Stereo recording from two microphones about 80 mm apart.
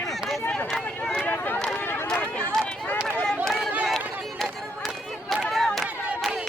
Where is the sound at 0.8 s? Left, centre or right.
Centre.